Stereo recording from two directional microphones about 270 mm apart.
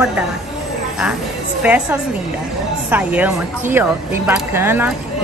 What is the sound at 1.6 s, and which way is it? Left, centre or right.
A woman's voice, centre.